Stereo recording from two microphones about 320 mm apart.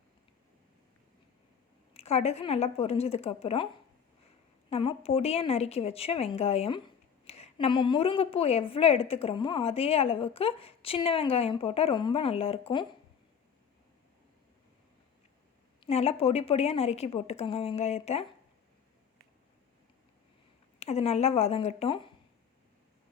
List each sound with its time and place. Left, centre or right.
1.9 s a woman's voice: centre
4.7 s a woman's voice: centre
15.8 s a woman's voice: centre
20.7 s a woman's voice: centre